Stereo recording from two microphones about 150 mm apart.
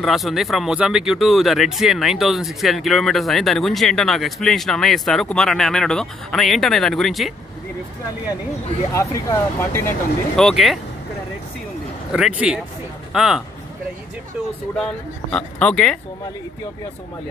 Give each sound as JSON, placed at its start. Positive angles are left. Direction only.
{"t": 0.0, "sound": "speech", "side_deg": 0}
{"t": 8.9, "sound": "speech", "side_deg": 20}
{"t": 10.3, "sound": "speech", "side_deg": 0}
{"t": 12.1, "sound": "speech", "side_deg": -5}
{"t": 15.3, "sound": "speech", "side_deg": 5}